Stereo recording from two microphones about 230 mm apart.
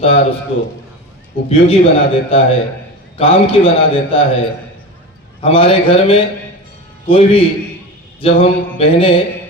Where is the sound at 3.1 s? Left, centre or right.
Left.